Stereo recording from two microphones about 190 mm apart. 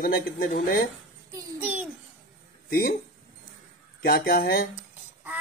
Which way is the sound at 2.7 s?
55° left (ahead or behind).